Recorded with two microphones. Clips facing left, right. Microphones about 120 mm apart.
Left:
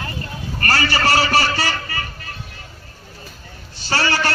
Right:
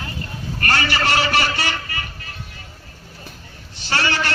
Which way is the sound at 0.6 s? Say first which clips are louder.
Left 1 dB; 35° left (ahead or behind).